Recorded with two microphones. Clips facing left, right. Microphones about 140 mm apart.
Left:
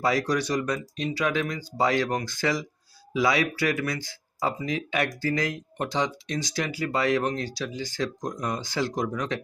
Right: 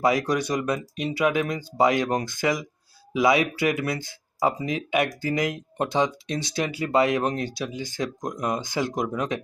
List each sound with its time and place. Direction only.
0.0 s speech: 20° right (ahead or behind)